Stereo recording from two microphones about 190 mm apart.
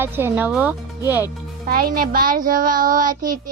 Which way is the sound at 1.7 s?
50° right (ahead or behind).